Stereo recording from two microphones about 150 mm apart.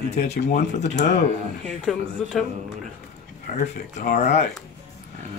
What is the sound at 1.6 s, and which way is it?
Speech, centre (ahead or behind).